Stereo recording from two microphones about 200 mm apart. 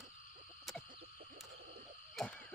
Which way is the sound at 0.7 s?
Centre (ahead or behind).